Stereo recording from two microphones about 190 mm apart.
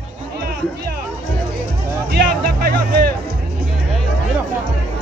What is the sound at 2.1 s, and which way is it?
Music, 55° right (ahead or behind).